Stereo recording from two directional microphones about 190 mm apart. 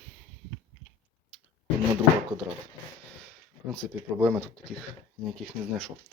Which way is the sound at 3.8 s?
Centre (ahead or behind).